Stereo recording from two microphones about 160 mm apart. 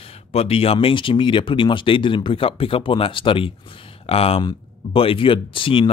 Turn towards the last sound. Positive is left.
turn(degrees=35)  # may be behind; listen again after turning